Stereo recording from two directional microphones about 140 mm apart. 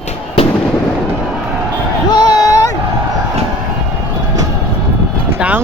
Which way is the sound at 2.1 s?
30° left (ahead or behind).